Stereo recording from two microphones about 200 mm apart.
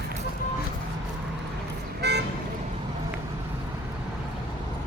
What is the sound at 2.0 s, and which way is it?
Vehicle, 55° right (ahead or behind).